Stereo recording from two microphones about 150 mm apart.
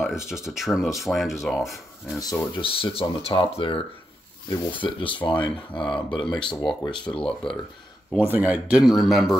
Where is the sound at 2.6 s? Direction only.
40° left (ahead or behind).